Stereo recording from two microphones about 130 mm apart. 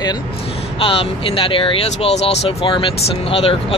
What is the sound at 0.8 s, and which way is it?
Speech, 45° left (ahead or behind).